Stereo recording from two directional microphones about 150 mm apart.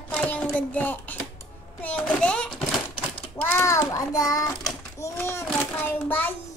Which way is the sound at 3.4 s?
15° left (ahead or behind).